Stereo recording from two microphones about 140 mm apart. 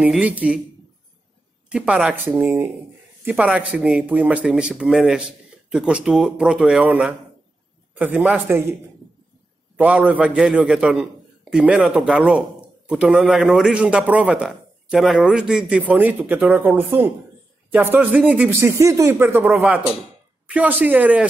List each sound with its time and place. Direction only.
0.0 s a man's voice: 10° right (ahead or behind)
1.7 s a man's voice: 5° right (ahead or behind)
9.8 s a man's voice: 10° right (ahead or behind)